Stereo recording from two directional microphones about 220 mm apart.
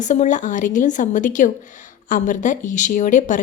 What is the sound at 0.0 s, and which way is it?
A woman's voice, 35° left (ahead or behind).